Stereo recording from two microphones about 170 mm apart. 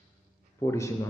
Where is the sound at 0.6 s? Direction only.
15° left (ahead or behind).